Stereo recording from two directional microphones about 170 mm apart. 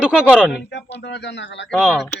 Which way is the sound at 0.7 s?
90° left.